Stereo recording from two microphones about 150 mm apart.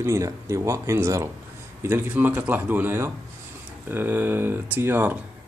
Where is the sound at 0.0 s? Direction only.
20° right (ahead or behind).